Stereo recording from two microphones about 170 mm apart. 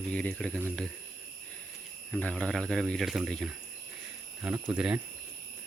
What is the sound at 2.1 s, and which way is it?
Speech, 5° left (ahead or behind).